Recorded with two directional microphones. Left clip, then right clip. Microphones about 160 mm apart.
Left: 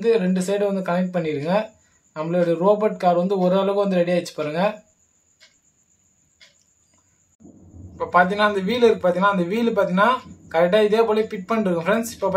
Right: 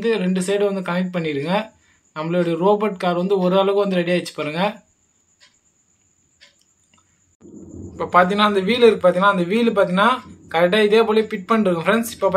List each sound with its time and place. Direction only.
0.0 s a man's voice: 15° right (ahead or behind)
7.9 s a man's voice: 25° right (ahead or behind)